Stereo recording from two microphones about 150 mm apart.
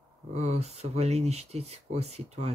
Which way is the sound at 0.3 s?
45° right (ahead or behind).